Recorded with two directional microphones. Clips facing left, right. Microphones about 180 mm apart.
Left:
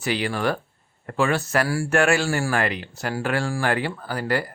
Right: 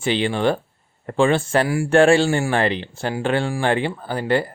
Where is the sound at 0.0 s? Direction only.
25° right (ahead or behind).